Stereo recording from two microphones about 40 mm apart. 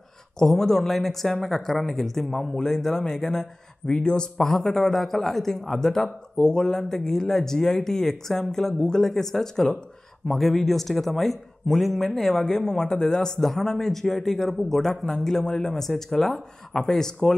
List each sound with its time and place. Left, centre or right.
0.4 s a man's voice: centre
14.8 s speech: centre